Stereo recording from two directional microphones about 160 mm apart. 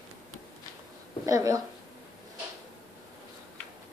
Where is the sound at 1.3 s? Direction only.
20° right (ahead or behind).